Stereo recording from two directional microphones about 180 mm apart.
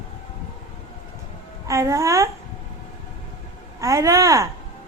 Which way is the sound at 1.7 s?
15° right (ahead or behind).